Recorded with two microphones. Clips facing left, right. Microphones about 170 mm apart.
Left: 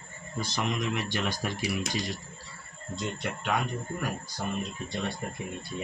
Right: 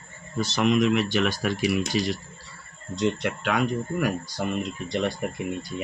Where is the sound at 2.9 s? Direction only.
85° right.